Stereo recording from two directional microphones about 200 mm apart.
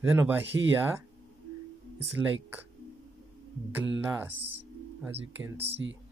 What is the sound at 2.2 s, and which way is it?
Speech, 15° right (ahead or behind).